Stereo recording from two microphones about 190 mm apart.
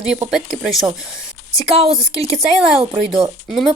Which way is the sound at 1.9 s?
Centre (ahead or behind).